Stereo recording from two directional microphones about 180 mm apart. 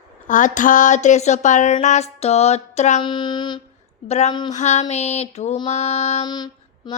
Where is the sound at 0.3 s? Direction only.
45° left (ahead or behind).